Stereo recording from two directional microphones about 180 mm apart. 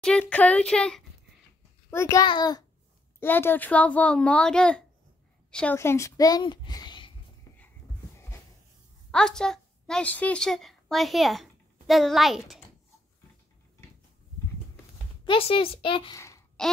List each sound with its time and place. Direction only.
0.0 s a child's voice: 5° left (ahead or behind)
1.9 s a child's voice: 15° left (ahead or behind)
3.2 s a child's voice: 10° left (ahead or behind)
9.1 s a woman's voice: 5° left (ahead or behind)
15.2 s a woman's voice: 30° left (ahead or behind)
16.2 s babbling: 15° left (ahead or behind)